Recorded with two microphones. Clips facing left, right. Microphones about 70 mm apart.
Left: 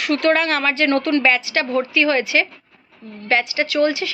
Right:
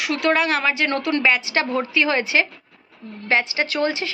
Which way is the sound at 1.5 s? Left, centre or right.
Right.